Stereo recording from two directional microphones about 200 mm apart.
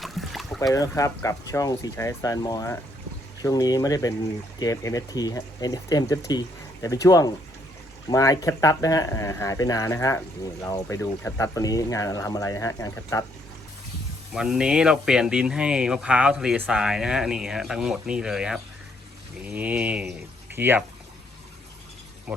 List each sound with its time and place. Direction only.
0.0 s boat: centre (ahead or behind)
0.7 s speech: 15° left (ahead or behind)
14.3 s speech: 5° right (ahead or behind)